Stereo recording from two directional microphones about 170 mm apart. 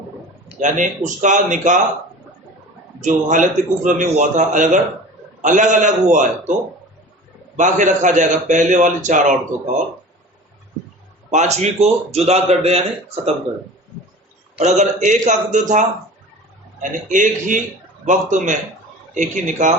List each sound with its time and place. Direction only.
0.6 s a man's voice: 45° right (ahead or behind)
3.0 s a man's voice: 50° right (ahead or behind)
7.5 s a man's voice: 45° right (ahead or behind)
11.3 s a man's voice: 40° right (ahead or behind)
14.6 s a man's voice: 45° right (ahead or behind)